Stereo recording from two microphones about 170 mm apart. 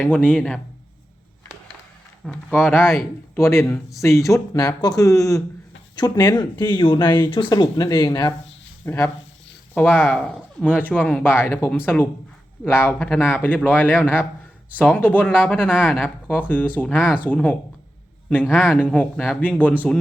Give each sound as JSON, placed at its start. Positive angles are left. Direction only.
{"t": 0.0, "sound": "speech", "side_deg": 10}
{"t": 2.2, "sound": "speech", "side_deg": 5}
{"t": 8.8, "sound": "speech", "side_deg": 15}